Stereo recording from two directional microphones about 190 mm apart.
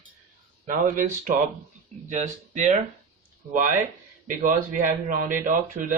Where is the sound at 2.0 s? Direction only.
40° right (ahead or behind).